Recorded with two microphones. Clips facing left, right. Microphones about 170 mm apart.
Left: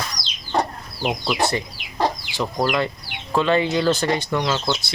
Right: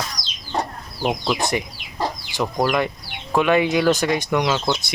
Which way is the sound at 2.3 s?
15° right (ahead or behind).